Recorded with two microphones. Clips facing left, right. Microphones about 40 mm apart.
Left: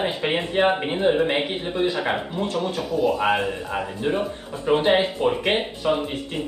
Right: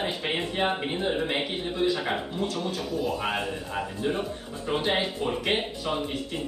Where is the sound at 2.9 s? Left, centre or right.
Centre.